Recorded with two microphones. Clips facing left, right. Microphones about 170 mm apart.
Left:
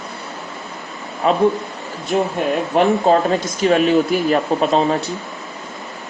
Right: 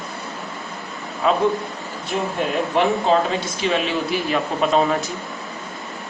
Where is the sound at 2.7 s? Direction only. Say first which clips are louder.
Left 4 dB; 45° left (ahead or behind).